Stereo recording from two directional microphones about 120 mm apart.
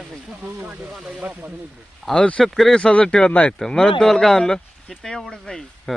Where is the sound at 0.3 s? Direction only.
15° right (ahead or behind).